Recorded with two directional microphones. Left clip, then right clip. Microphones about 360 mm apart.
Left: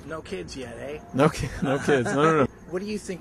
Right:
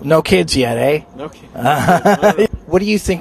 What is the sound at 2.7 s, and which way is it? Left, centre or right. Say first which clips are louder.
Speech: right 16 dB; right.